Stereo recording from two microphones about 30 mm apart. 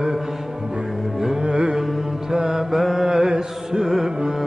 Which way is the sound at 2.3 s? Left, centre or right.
Centre.